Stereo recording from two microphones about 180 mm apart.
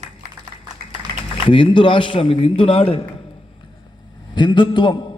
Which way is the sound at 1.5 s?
30° left (ahead or behind).